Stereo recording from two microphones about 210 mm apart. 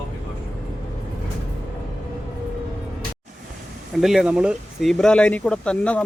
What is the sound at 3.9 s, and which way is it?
Speech, centre (ahead or behind).